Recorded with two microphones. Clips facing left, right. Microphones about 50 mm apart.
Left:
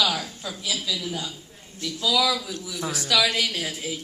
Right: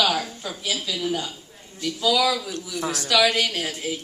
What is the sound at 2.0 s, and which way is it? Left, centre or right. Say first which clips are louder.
Speech: right 2 dB; right.